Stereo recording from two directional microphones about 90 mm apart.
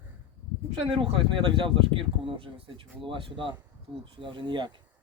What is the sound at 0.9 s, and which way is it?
Speech, 80° right.